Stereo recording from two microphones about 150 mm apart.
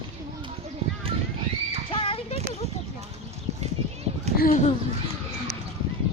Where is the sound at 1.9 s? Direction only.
35° left (ahead or behind).